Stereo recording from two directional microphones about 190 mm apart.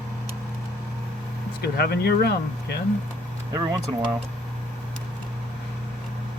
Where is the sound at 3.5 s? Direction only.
20° right (ahead or behind).